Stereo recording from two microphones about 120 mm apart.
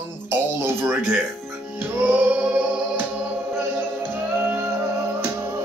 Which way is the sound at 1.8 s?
15° right (ahead or behind).